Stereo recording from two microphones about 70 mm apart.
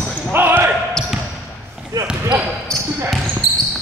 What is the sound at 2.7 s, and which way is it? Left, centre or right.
Basketball bounce, centre.